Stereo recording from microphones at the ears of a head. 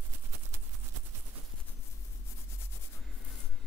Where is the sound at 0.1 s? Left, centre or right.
Right.